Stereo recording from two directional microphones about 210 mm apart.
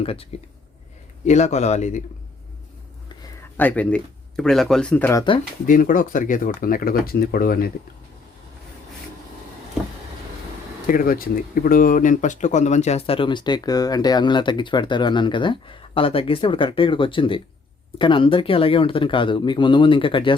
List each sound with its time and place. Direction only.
0.0 s speech: 25° left (ahead or behind)
3.6 s speech: 5° left (ahead or behind)
5.6 s speech: 40° left (ahead or behind)
10.8 s speech: 40° left (ahead or behind); by 20.3 s 25° left (ahead or behind)